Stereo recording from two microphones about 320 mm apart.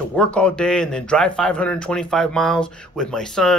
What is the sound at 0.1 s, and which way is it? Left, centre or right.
Speech, centre.